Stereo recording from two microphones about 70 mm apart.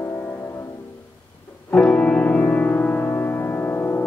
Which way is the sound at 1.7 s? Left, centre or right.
Centre.